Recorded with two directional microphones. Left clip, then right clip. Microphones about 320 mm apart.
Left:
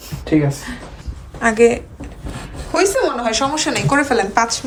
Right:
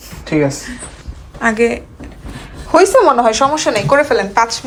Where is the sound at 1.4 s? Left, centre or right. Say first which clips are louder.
Left 1 dB; centre.